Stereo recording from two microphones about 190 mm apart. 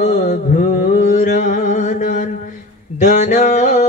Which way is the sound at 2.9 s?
40° left (ahead or behind).